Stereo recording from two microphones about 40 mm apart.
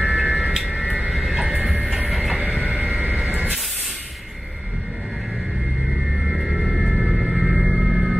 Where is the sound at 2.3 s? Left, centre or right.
Right.